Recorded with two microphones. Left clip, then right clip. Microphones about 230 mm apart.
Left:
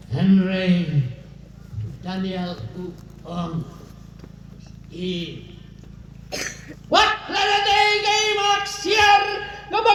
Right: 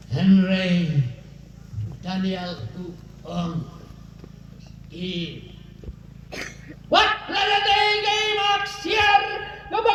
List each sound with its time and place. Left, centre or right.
0.1 s speech: right
2.0 s speech: right
4.9 s speech: right
6.4 s a sound: left
7.3 s music: right